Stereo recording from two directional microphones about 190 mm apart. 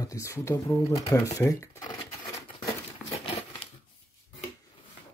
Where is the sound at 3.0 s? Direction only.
Centre (ahead or behind).